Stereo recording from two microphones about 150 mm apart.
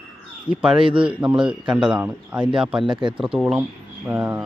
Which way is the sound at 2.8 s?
35° right (ahead or behind).